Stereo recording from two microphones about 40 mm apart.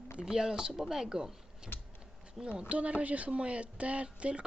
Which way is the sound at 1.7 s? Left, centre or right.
Left.